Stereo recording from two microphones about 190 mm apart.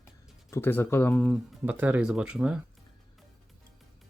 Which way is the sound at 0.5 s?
10° left (ahead or behind).